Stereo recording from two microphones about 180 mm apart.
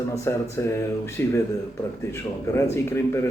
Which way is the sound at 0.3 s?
15° left (ahead or behind).